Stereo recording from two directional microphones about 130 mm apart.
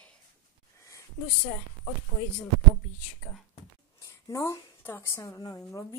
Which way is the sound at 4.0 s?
25° left (ahead or behind).